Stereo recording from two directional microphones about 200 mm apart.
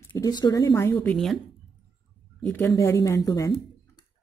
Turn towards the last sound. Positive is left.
turn(degrees=15)  # may be behind; listen again after turning